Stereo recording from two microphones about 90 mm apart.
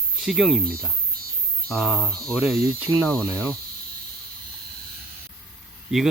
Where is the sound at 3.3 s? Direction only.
30° right (ahead or behind).